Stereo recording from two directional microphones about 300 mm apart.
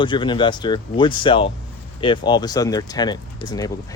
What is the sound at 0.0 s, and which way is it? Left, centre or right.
Speech, centre.